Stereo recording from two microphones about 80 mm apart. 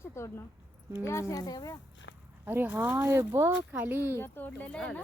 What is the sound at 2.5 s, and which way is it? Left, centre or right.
Speech, right.